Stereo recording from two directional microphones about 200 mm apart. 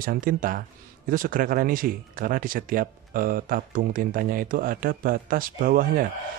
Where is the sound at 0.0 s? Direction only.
45° right (ahead or behind).